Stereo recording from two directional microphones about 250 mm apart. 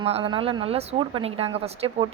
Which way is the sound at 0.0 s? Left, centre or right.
Right.